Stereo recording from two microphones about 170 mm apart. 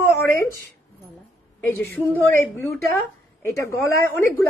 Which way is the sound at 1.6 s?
10° left (ahead or behind).